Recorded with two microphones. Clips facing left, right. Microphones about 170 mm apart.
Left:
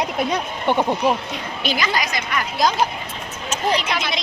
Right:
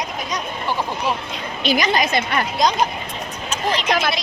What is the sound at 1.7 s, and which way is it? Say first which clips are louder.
Speech: right 5 dB; 20° right (ahead or behind).